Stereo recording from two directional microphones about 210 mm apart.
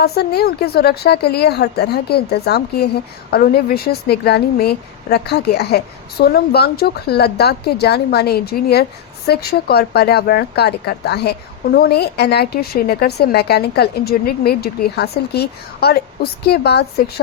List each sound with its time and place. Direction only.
0.0 s a woman's voice: 50° left (ahead or behind)